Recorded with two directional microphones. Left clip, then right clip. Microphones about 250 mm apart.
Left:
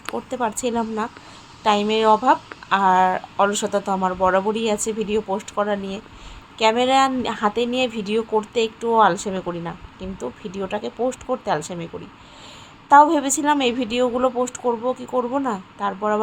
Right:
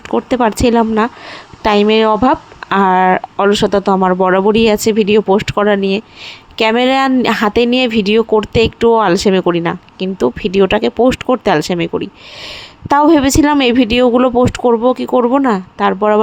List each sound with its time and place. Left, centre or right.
0.1 s speech: right